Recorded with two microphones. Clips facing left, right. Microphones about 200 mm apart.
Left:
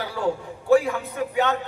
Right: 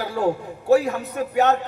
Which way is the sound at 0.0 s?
45° right (ahead or behind).